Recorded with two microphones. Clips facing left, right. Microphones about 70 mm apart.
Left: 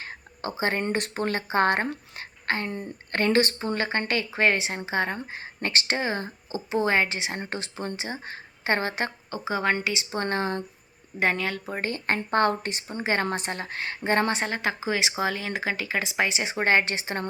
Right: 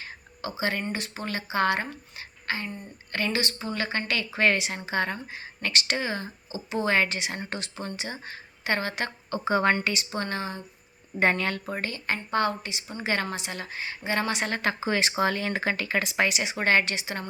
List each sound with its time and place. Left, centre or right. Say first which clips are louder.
0.0 s a sound: left 2 dB; left
0.8 s speech: left 5 dB; left
2.6 s a woman's voice: left 5 dB; left
3.1 s speech: left 6 dB; left
9.3 s speech: right 4 dB; centre
9.8 s speech: left 1 dB; centre
10.2 s speech: left 5 dB; left
11.2 s speech: right 1 dB; centre
11.8 s speech: left 3 dB; left
13.0 s speech: left 2 dB; left
13.2 s speech: left 4 dB; left
14.4 s speech: even; centre
16.3 s speech: left 3 dB; left